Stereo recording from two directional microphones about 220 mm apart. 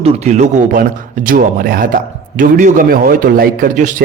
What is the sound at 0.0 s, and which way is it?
Speech, 30° right (ahead or behind).